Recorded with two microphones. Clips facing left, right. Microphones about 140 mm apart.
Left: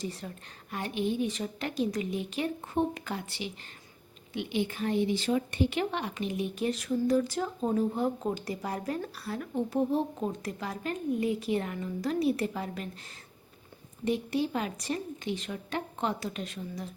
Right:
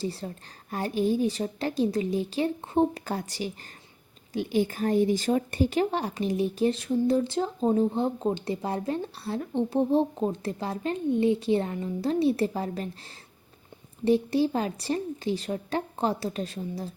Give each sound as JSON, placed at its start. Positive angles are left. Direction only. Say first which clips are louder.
{"t": 0.0, "sound": "speech", "louder": "right 5 dB", "side_deg": -30}
{"t": 14.0, "sound": "speech", "louder": "right 6 dB", "side_deg": -30}